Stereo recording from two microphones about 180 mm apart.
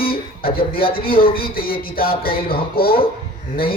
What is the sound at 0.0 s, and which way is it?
A man's voice, 55° left (ahead or behind).